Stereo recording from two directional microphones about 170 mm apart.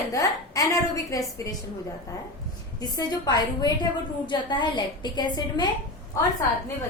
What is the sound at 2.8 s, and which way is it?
A woman's voice, 25° left (ahead or behind).